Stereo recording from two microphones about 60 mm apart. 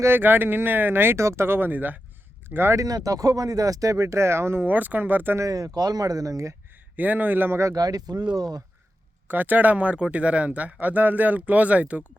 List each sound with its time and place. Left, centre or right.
0.2 s speech: right
1.2 s speech: right
2.7 s speech: right
4.6 s speech: right
5.4 s speech: right
6.9 s speech: right
7.6 s speech: right
9.2 s speech: right